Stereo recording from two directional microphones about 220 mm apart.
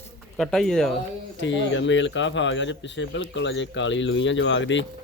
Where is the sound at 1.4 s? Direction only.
55° left (ahead or behind).